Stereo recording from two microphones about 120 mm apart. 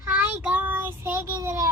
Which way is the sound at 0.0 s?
15° right (ahead or behind).